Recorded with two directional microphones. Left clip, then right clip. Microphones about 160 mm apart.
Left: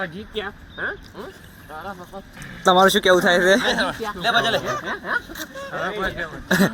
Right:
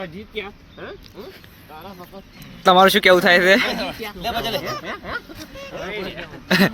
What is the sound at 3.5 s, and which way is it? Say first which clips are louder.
Speech: right 1 dB; 15° right (ahead or behind).